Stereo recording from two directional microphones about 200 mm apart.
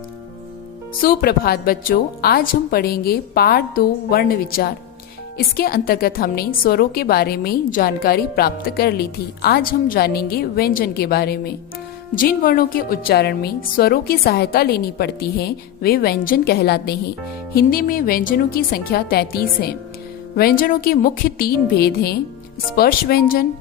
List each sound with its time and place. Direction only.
1.0 s a woman's voice: 50° left (ahead or behind)